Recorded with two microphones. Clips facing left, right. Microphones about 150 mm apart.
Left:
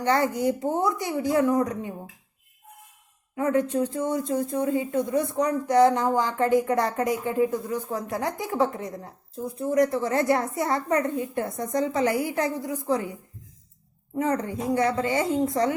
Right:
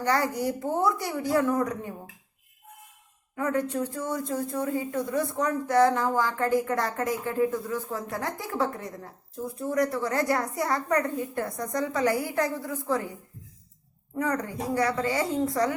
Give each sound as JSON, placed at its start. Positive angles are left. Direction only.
{"t": 0.0, "sound": "speech", "side_deg": 20}
{"t": 3.3, "sound": "speech", "side_deg": 20}
{"t": 14.2, "sound": "speech", "side_deg": 20}